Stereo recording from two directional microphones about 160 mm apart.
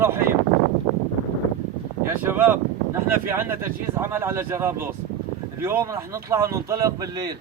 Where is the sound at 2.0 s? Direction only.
10° right (ahead or behind).